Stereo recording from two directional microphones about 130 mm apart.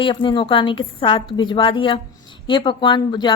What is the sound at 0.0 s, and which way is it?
A woman's voice, 40° left (ahead or behind).